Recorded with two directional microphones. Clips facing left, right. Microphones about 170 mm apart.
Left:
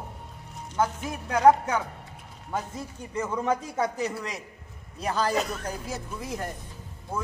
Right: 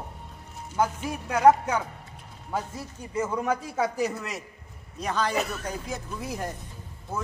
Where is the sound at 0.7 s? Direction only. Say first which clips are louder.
Right 1 dB; 10° right (ahead or behind).